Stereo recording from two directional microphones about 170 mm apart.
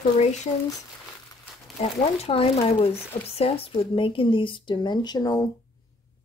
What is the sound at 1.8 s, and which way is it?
Speech, 40° left (ahead or behind).